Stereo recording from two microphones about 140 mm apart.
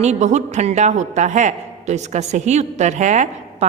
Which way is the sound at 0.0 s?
55° right (ahead or behind).